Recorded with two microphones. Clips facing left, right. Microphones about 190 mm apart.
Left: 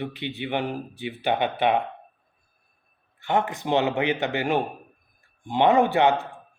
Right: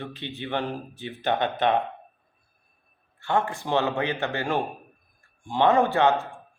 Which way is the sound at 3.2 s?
20° left (ahead or behind).